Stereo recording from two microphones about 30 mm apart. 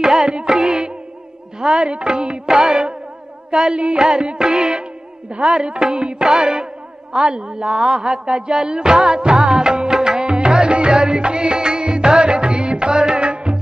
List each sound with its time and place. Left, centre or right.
0.0 s music: centre
1.8 s music: right
3.7 s music: right
4.0 s music: right
9.7 s music: right
11.0 s music: right
13.2 s music: right